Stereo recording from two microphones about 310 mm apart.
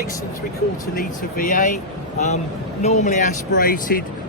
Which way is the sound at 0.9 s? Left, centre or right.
Left.